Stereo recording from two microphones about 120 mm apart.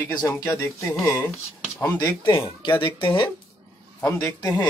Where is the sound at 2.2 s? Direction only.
40° left (ahead or behind).